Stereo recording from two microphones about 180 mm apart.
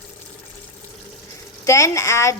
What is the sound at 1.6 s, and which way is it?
Speech, 15° left (ahead or behind).